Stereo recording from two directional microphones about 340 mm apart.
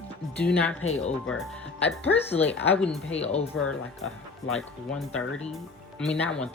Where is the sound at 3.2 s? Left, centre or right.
Centre.